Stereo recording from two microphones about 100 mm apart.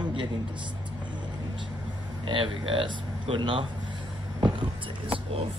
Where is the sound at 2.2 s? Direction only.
60° right (ahead or behind).